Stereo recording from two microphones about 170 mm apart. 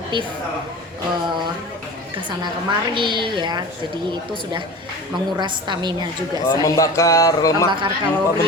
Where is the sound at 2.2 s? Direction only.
30° right (ahead or behind).